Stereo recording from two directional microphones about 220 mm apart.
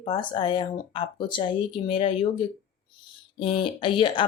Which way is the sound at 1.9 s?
25° left (ahead or behind).